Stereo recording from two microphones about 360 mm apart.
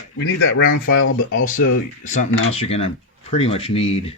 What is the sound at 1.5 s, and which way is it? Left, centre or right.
Speech, left.